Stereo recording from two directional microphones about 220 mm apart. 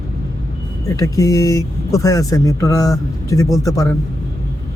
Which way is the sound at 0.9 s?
15° left (ahead or behind).